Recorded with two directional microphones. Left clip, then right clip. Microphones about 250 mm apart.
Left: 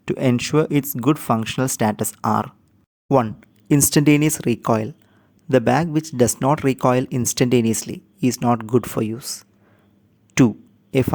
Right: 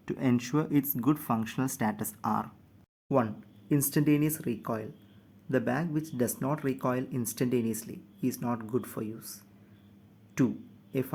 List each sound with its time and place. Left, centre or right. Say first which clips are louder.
0.0 s speech: left 10 dB; left